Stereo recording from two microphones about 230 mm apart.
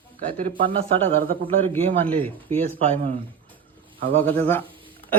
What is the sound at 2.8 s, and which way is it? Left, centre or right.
Speech, right.